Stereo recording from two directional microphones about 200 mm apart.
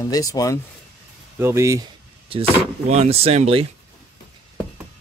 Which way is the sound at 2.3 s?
30° right (ahead or behind).